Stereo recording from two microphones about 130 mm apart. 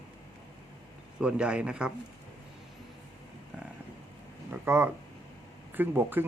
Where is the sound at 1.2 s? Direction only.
10° right (ahead or behind).